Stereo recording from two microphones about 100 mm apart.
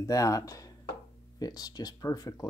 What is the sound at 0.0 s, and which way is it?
Speech, 35° left (ahead or behind).